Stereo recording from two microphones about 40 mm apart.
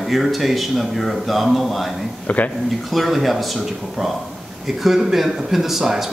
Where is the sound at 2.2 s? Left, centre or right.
Left.